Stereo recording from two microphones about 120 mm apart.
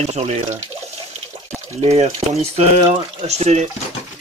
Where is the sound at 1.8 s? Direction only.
60° right (ahead or behind).